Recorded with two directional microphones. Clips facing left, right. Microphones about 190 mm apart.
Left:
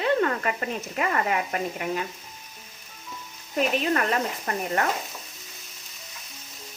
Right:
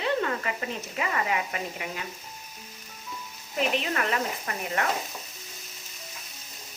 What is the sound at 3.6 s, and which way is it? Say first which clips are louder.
A woman's voice: left 4 dB; 45° left (ahead or behind).